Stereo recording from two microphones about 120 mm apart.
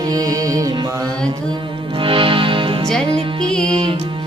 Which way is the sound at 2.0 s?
45° right (ahead or behind).